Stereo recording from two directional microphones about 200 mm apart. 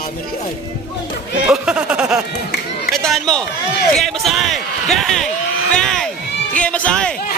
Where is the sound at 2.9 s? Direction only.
Centre (ahead or behind).